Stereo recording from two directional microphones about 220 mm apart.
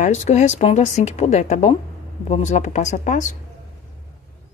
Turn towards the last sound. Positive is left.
turn(degrees=35)  # may be behind; listen again after turning